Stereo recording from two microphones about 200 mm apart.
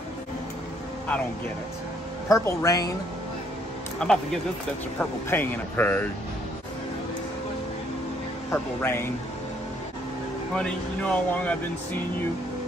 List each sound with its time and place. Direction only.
2.2 s a man's voice: 15° left (ahead or behind)
4.0 s speech: 5° left (ahead or behind)
5.3 s a man's voice: 10° left (ahead or behind)
8.5 s a man's voice: 10° left (ahead or behind)
10.5 s speech: 5° left (ahead or behind)